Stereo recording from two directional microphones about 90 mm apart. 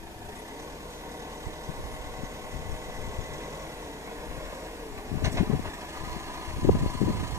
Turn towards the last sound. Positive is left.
turn(degrees=-30)  # may be behind; listen again after turning